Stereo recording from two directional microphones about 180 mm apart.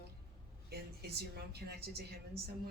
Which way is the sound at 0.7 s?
60° right (ahead or behind).